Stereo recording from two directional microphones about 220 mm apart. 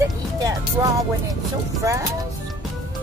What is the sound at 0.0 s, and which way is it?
Music, 15° right (ahead or behind).